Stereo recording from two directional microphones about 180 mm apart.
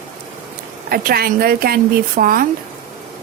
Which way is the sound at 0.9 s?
55° right (ahead or behind).